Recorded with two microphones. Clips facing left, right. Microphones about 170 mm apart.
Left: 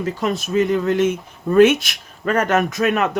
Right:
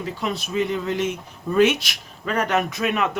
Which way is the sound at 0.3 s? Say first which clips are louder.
Left 7 dB; centre (ahead or behind).